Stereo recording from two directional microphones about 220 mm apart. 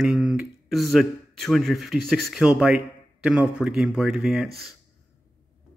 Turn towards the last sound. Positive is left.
turn(degrees=0)  # may be behind; listen again after turning